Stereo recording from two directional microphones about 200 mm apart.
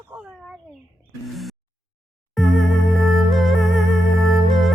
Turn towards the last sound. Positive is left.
turn(degrees=0)  # may be behind; listen again after turning